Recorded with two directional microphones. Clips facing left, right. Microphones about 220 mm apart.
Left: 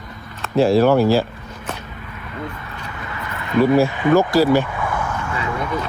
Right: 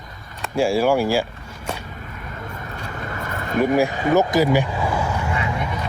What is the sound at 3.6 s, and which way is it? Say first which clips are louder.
Speech: left 3 dB; 15° right (ahead or behind).